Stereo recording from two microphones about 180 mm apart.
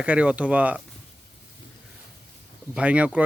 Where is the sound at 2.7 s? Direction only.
5° right (ahead or behind).